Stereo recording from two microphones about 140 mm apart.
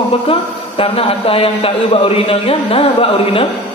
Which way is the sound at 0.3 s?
40° left (ahead or behind).